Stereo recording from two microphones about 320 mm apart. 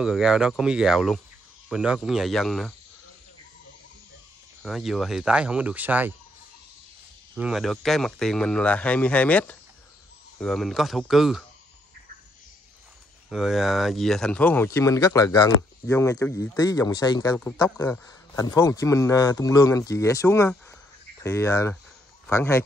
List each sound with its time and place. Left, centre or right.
0.0 s speech: centre
4.6 s speech: centre
7.3 s speech: centre
13.3 s speech: centre